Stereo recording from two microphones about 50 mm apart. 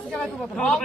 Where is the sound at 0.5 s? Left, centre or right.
Centre.